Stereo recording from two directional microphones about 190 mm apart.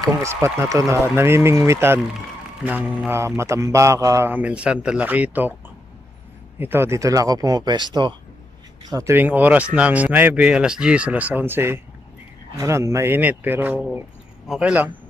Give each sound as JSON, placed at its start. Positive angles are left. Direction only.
{"t": 0.0, "sound": "speech", "side_deg": -15}
{"t": 6.6, "sound": "speech", "side_deg": -10}